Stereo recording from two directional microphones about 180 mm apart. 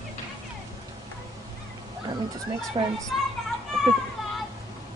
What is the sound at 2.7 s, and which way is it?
Speech, 25° right (ahead or behind).